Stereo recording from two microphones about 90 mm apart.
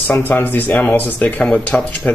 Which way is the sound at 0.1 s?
20° left (ahead or behind).